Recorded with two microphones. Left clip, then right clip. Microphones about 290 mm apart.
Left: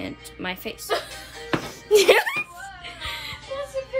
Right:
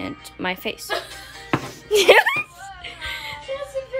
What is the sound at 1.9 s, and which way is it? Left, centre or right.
Speech, centre.